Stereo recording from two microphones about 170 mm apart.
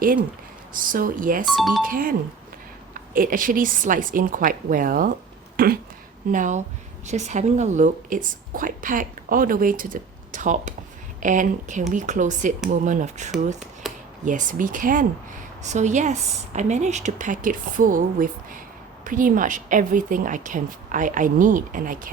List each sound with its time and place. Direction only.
0.7 s a woman's voice: 55° right (ahead or behind)
1.5 s speech: centre (ahead or behind)
1.9 s a woman's voice: 55° right (ahead or behind)
6.3 s a woman's voice: 50° right (ahead or behind)
13.8 s a sound: centre (ahead or behind)
14.3 s a woman's voice: 50° right (ahead or behind)